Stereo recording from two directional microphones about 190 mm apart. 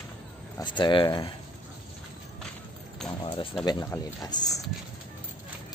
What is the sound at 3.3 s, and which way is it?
Speech, 25° left (ahead or behind).